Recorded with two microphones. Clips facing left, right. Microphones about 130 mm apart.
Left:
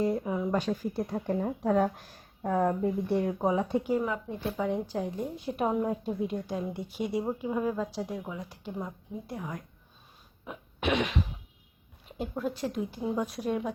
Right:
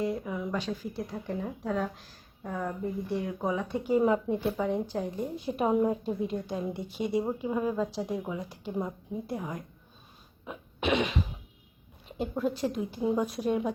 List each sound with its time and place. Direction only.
0.0 s speech: 35° left (ahead or behind)
0.5 s speech: 50° left (ahead or behind)
3.4 s speech: 30° left (ahead or behind)
4.0 s speech: 25° right (ahead or behind)
4.4 s a woman's voice: centre (ahead or behind)
10.4 s throat clearing: centre (ahead or behind)
12.1 s a woman's voice: centre (ahead or behind)